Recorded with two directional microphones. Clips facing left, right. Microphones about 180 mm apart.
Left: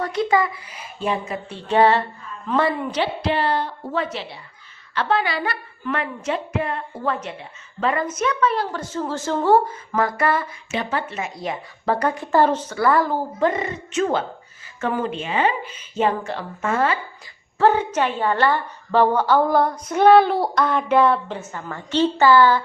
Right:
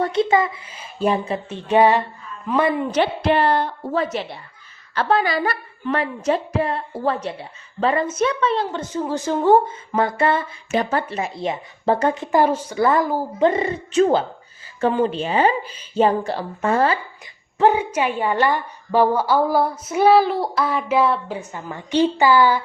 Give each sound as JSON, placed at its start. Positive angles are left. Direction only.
{"t": 0.0, "sound": "a woman's voice", "side_deg": -25}
{"t": 0.9, "sound": "a woman's voice", "side_deg": -35}
{"t": 1.5, "sound": "a woman's voice", "side_deg": -15}
{"t": 2.9, "sound": "a sound", "side_deg": -55}
{"t": 3.9, "sound": "a woman's voice", "side_deg": -40}
{"t": 10.7, "sound": "a woman's voice", "side_deg": -40}
{"t": 13.4, "sound": "a woman's voice", "side_deg": -30}
{"t": 17.6, "sound": "a woman's voice", "side_deg": -10}